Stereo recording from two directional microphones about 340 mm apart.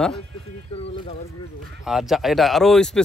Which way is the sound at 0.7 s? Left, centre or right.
Centre.